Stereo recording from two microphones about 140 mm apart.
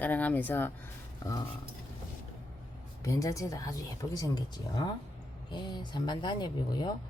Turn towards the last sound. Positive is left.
turn(degrees=30)  # may be behind; listen again after turning